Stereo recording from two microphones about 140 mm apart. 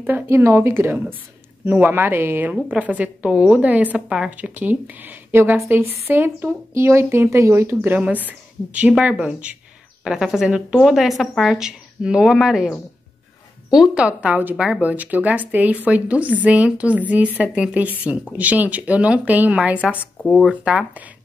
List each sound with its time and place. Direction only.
0.0 s a woman's voice: 15° right (ahead or behind)
20.0 s speech: 10° left (ahead or behind)
20.4 s a woman's voice: 5° right (ahead or behind)